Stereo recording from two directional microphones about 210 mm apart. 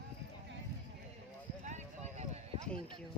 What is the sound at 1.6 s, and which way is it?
Clip-clop, 35° right (ahead or behind).